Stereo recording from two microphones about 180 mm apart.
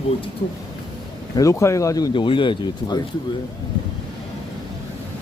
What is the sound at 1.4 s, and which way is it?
Speech, 15° left (ahead or behind).